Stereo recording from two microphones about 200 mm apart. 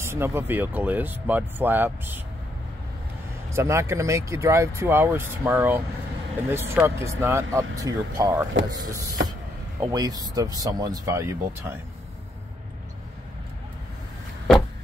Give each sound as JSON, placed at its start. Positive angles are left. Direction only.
{"t": 0.0, "sound": "speech", "side_deg": -10}
{"t": 3.4, "sound": "speech", "side_deg": -15}